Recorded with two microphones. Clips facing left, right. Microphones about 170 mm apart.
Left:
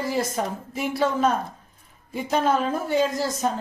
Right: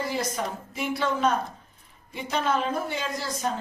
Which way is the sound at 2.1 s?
45° left (ahead or behind).